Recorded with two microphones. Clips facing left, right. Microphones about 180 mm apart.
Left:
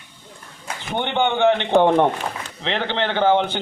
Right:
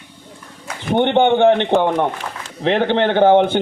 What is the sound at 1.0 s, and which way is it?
A man's voice, 55° right (ahead or behind).